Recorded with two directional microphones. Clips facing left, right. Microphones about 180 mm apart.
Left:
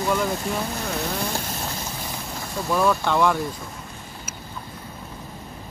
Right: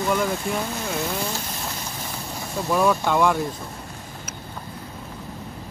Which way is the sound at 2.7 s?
5° right (ahead or behind).